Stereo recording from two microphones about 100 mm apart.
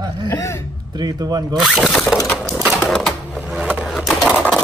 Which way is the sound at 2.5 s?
5° right (ahead or behind).